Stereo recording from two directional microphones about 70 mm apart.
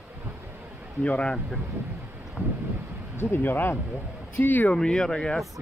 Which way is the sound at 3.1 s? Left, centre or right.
Left.